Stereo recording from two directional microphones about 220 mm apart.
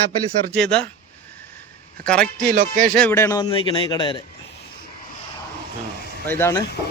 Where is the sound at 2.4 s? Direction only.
45° right (ahead or behind).